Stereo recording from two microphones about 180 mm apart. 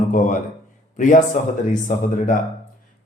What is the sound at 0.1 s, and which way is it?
Speech, 45° left (ahead or behind).